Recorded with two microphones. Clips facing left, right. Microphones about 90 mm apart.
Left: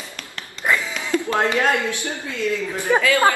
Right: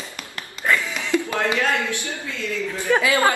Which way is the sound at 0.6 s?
15° left (ahead or behind).